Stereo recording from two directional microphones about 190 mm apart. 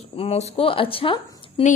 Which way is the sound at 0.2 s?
35° left (ahead or behind).